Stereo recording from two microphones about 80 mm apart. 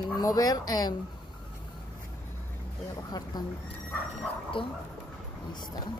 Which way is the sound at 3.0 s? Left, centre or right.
Left.